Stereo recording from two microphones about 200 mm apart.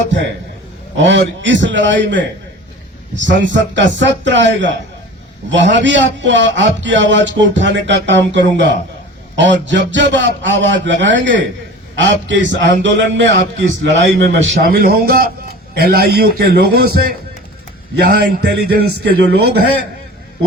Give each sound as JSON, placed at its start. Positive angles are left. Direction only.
{"t": 0.9, "sound": "a man's voice", "side_deg": -65}